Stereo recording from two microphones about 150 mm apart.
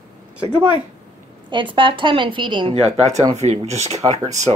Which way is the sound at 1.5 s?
35° right (ahead or behind).